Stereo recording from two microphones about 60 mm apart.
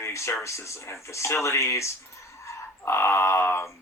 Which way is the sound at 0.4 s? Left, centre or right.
Left.